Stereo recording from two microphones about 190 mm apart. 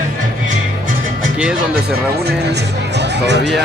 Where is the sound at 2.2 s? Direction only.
60° right (ahead or behind).